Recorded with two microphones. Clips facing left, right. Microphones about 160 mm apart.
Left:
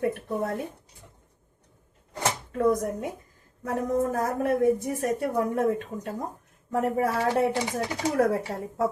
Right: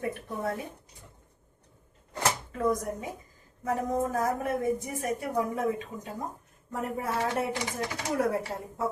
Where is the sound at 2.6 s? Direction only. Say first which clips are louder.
Left 8 dB; 65° left (ahead or behind).